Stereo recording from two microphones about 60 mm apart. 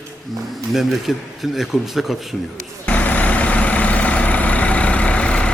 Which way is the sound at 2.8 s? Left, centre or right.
Left.